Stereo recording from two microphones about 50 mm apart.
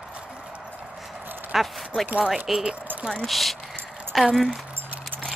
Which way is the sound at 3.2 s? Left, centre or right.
Centre.